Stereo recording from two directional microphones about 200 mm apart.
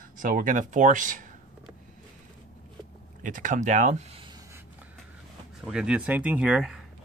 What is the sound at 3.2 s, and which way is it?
Speech, 40° right (ahead or behind).